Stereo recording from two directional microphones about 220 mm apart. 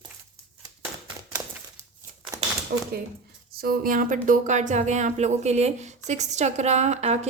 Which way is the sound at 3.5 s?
40° right (ahead or behind).